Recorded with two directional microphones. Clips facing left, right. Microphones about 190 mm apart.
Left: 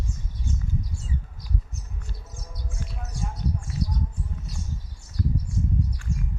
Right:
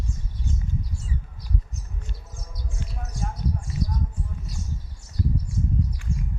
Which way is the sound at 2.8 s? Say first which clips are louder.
Right 1 dB; 20° right (ahead or behind).